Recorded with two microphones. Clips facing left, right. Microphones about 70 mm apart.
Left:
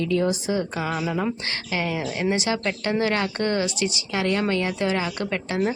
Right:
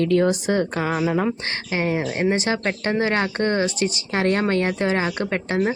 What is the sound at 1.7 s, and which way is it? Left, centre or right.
Speech, right.